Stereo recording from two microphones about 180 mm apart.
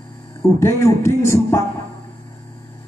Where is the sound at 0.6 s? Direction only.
15° left (ahead or behind).